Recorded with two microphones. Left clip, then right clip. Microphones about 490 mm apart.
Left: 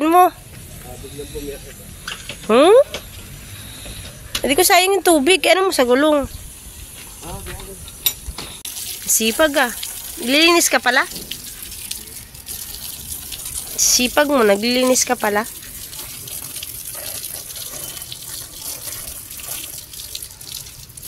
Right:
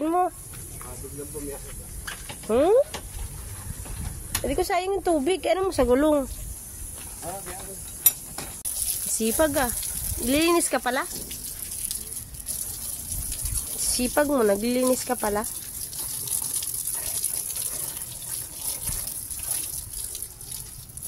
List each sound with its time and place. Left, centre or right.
0.0 s a sound: right
2.4 s speech: right
4.4 s speech: right
9.2 s speech: right
13.9 s speech: right